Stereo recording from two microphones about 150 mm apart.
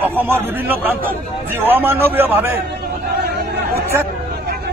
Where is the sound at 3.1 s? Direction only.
90° right.